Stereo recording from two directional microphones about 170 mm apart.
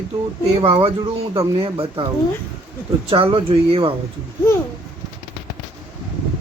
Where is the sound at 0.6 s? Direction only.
35° right (ahead or behind).